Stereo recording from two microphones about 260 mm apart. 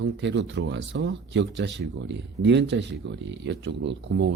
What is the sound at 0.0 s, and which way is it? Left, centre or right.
Speech, right.